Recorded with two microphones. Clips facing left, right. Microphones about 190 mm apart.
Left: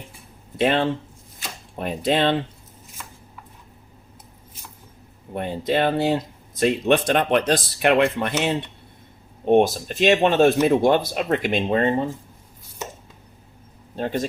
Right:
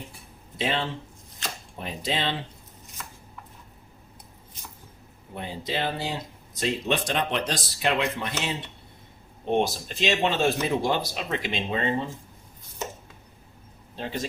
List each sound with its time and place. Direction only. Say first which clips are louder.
0.5 s speech: left 8 dB; 55° left (ahead or behind)
5.3 s speech: left 9 dB; 55° left (ahead or behind)
13.9 s speech: left 7 dB; 50° left (ahead or behind)